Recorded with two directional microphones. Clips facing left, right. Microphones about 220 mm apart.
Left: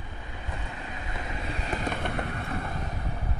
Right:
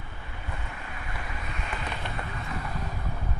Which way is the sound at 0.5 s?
20° left (ahead or behind).